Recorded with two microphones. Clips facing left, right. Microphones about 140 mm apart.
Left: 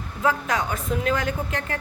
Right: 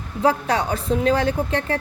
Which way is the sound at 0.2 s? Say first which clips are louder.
Right 4 dB; 35° right (ahead or behind).